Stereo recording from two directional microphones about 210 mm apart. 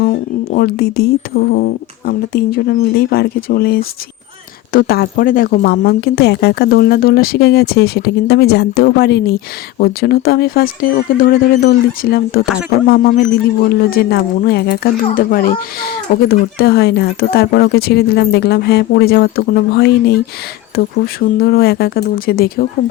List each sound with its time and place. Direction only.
0.5 s a woman's voice: 50° left (ahead or behind)